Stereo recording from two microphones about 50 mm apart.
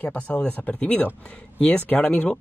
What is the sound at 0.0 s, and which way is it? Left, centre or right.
Speech, left.